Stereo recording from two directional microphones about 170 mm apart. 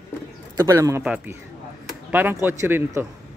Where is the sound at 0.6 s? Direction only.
15° right (ahead or behind).